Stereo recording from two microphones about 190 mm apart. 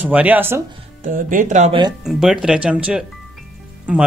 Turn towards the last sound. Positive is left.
turn(degrees=-5)  # may be behind; listen again after turning